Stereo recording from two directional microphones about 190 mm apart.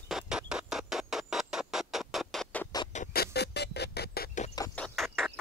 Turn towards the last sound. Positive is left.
turn(degrees=5)  # may be behind; listen again after turning